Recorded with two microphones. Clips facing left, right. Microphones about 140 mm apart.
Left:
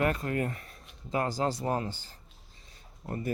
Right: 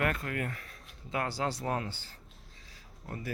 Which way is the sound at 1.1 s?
40° left (ahead or behind).